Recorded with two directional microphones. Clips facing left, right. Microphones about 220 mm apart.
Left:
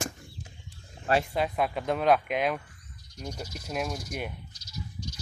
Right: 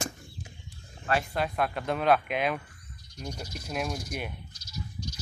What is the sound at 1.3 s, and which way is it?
Speech, centre (ahead or behind).